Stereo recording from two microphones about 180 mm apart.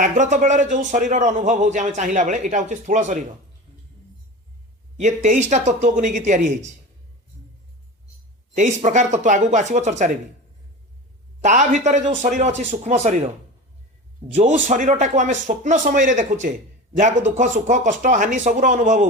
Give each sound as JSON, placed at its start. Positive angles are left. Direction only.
{"t": 0.0, "sound": "a man's voice", "side_deg": -45}
{"t": 4.9, "sound": "a man's voice", "side_deg": -40}
{"t": 8.5, "sound": "a man's voice", "side_deg": -45}
{"t": 11.3, "sound": "a man's voice", "side_deg": -40}
{"t": 14.3, "sound": "a man's voice", "side_deg": -40}